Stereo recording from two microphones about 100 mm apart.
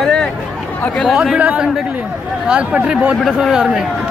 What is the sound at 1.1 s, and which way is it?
Speech, 5° right (ahead or behind).